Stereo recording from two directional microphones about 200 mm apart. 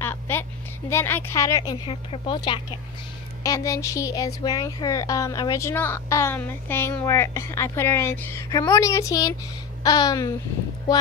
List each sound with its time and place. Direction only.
0.0 s a woman's voice: 10° left (ahead or behind)
9.8 s babbling: 20° left (ahead or behind)